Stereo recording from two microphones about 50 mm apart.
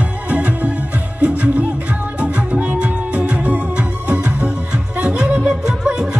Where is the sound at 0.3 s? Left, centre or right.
Right.